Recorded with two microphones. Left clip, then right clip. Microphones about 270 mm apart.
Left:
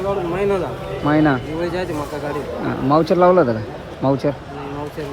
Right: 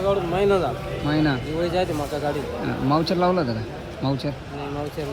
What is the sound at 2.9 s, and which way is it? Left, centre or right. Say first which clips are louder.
Speech: left 8 dB; centre.